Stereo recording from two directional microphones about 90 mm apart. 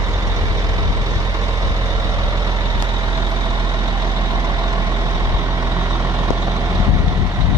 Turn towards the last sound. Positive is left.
turn(degrees=-40)  # may be behind; listen again after turning